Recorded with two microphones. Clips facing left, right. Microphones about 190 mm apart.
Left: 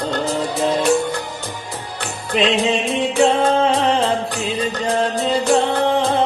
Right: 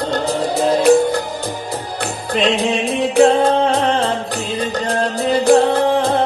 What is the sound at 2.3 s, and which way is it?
Music, 35° right (ahead or behind).